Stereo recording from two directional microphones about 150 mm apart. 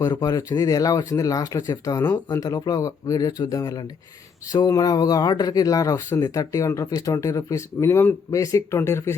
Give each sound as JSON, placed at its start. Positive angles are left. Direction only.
{"t": 0.0, "sound": "speech", "side_deg": 25}